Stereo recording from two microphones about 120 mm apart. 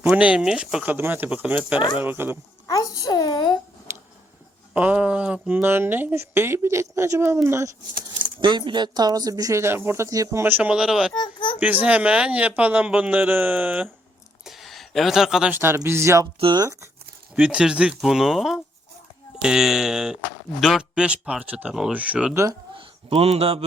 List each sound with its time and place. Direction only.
0.0 s a man's voice: 10° right (ahead or behind)
2.6 s a child's voice: 30° left (ahead or behind)
3.9 s a sound: 20° right (ahead or behind)
4.7 s speech: 10° right (ahead or behind)
8.4 s speech: 40° right (ahead or behind); by 11.1 s 5° right (ahead or behind)
11.1 s a child's voice: 40° left (ahead or behind)
11.6 s a man's voice: 10° right (ahead or behind)
14.4 s a sound: centre (ahead or behind)
15.5 s speech: 20° right (ahead or behind)
16.4 s speech: 40° right (ahead or behind)
17.3 s a man's voice: 10° right (ahead or behind)
22.8 s speech: 50° right (ahead or behind)